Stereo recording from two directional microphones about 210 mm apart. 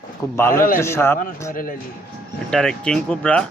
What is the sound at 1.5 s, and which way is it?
Speech, 40° left (ahead or behind).